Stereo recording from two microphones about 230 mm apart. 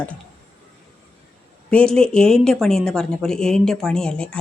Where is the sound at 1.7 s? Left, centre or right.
Centre.